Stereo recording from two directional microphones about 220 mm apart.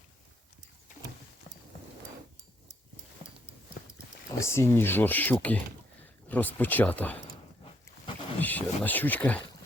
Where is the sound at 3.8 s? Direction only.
40° left (ahead or behind).